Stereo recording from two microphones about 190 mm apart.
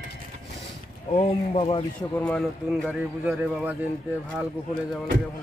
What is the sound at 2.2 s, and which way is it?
A man's voice, 5° left (ahead or behind).